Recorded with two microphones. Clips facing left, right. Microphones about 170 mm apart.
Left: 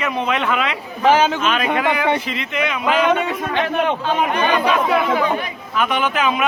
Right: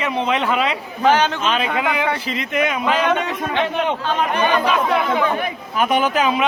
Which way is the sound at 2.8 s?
10° left (ahead or behind).